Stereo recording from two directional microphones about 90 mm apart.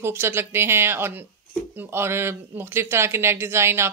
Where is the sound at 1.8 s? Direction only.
25° right (ahead or behind).